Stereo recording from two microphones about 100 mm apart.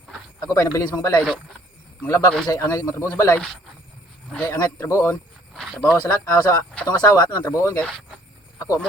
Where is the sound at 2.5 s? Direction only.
35° left (ahead or behind).